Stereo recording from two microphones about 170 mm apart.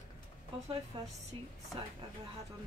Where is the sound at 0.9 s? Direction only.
25° right (ahead or behind).